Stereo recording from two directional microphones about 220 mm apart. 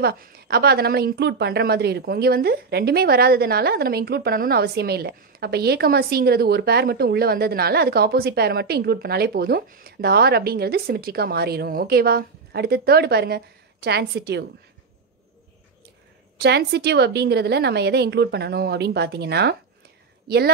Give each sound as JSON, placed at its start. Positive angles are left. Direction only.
{"t": 0.0, "sound": "a woman's voice", "side_deg": -45}
{"t": 16.3, "sound": "a woman's voice", "side_deg": -50}